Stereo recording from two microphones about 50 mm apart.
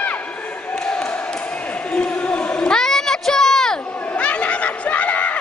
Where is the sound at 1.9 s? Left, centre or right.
Left.